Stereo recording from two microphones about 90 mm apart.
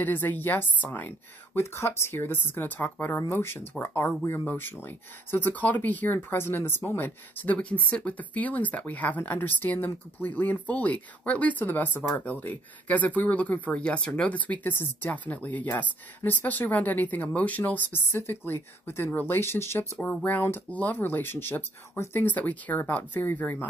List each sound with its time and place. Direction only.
0.0 s speech: 20° left (ahead or behind)